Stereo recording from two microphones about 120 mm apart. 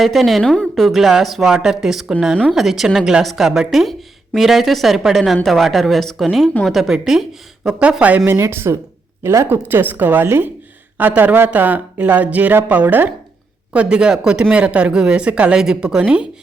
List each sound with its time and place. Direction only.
0.0 s speech: centre (ahead or behind)
8.2 s speech: 20° right (ahead or behind)